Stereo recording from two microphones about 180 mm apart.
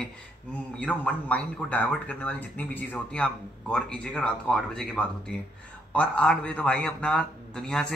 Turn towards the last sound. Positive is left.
turn(degrees=5)  # may be behind; listen again after turning